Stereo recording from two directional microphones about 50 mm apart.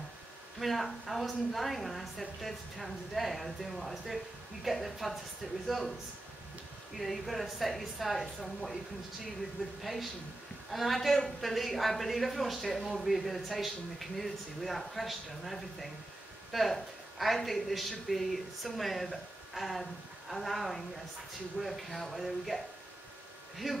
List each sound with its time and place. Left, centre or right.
0.6 s a man's voice: centre
7.0 s a man's voice: centre
10.7 s a man's voice: centre